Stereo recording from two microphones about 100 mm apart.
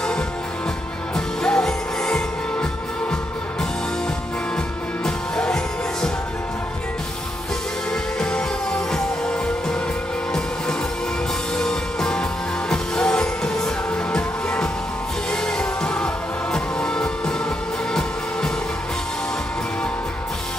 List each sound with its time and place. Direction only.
1.1 s music: 5° left (ahead or behind)
5.0 s music: 5° left (ahead or behind)
7.9 s music: 10° left (ahead or behind)
11.5 s music: 5° left (ahead or behind)